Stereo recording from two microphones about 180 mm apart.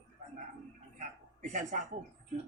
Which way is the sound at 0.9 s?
45° right (ahead or behind).